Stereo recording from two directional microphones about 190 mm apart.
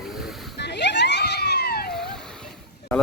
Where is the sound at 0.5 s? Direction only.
65° left (ahead or behind).